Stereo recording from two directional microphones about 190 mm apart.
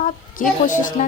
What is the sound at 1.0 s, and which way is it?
Speech, 40° left (ahead or behind).